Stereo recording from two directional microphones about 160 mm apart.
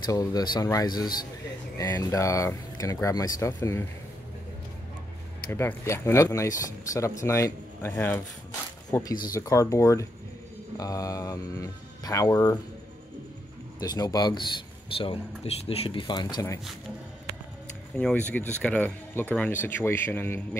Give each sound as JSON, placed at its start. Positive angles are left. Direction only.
{"t": 0.0, "sound": "speech", "side_deg": 25}
{"t": 5.5, "sound": "speech", "side_deg": 15}
{"t": 9.2, "sound": "speech", "side_deg": 25}
{"t": 13.7, "sound": "speech", "side_deg": 25}
{"t": 15.0, "sound": "speech", "side_deg": 35}
{"t": 17.9, "sound": "speech", "side_deg": 10}